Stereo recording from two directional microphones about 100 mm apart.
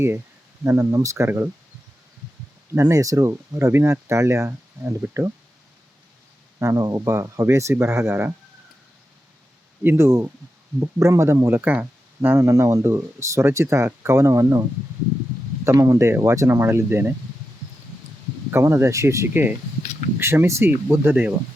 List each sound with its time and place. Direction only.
0.6 s speech: 25° right (ahead or behind)
1.1 s speech: 25° right (ahead or behind)
2.7 s speech: 30° right (ahead or behind)
6.6 s speech: 35° right (ahead or behind)
9.8 s speech: 25° right (ahead or behind)
15.6 s speech: 30° right (ahead or behind)
18.5 s speech: 25° right (ahead or behind)